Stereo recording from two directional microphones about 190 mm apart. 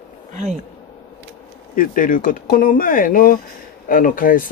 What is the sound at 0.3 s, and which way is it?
Speech, 40° right (ahead or behind).